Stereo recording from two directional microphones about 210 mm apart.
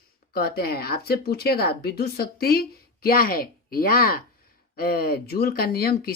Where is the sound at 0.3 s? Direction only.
45° left (ahead or behind).